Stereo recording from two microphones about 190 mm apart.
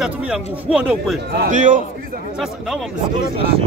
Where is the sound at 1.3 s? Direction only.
50° right (ahead or behind).